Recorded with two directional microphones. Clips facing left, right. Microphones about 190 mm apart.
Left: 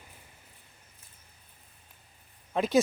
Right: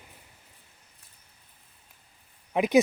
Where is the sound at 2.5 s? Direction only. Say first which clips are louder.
Right 3 dB; 15° right (ahead or behind).